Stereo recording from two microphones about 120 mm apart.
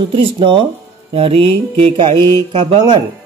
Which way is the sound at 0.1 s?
45° right (ahead or behind).